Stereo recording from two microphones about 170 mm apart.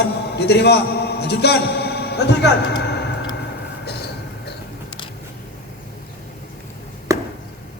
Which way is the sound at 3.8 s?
75° left (ahead or behind).